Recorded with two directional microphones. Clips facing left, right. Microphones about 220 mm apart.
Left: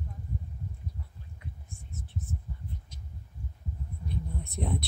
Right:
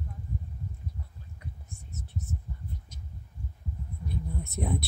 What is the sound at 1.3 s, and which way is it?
Whispering, 40° right (ahead or behind).